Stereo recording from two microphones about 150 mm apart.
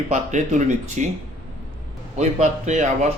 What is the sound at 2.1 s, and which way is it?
Speech, 50° right (ahead or behind).